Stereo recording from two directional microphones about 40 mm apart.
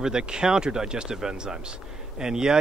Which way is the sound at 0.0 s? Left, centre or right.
Centre.